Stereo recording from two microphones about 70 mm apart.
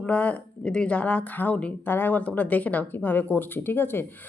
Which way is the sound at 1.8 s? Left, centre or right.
Left.